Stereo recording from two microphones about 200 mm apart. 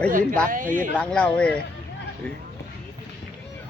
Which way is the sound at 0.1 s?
45° right (ahead or behind).